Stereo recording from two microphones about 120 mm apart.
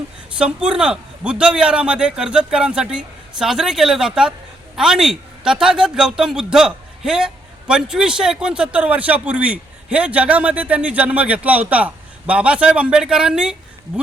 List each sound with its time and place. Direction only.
0.3 s a man's voice: 10° right (ahead or behind)